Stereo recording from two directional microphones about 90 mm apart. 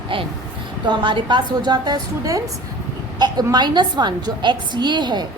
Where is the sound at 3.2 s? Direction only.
50° right (ahead or behind).